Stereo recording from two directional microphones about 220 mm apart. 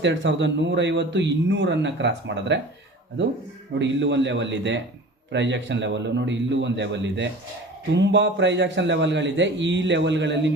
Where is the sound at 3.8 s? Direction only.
55° right (ahead or behind).